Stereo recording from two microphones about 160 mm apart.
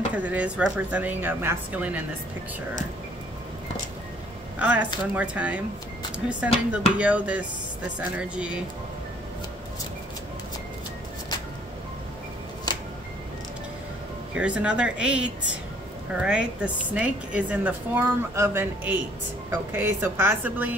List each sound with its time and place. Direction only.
0.1 s a woman's voice: 10° right (ahead or behind)
4.6 s a woman's voice: 10° right (ahead or behind)
12.7 s music: 25° left (ahead or behind)
14.3 s a woman's voice: 5° right (ahead or behind)